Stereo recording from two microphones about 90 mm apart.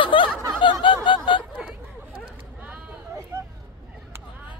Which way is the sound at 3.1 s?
30° right (ahead or behind).